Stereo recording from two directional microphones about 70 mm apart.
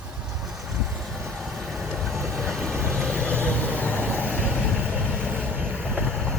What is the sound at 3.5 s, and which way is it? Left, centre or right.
Vehicle, right.